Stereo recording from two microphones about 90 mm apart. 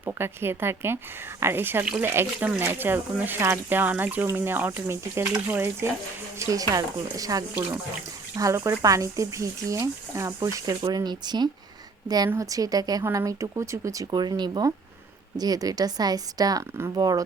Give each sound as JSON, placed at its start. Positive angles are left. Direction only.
{"t": 0.0, "sound": "speech", "side_deg": -25}
{"t": 6.4, "sound": "speech", "side_deg": -40}
{"t": 10.8, "sound": "speech", "side_deg": -50}
{"t": 14.1, "sound": "speech", "side_deg": -55}